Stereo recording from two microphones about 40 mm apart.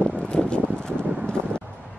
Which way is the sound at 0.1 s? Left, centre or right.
Left.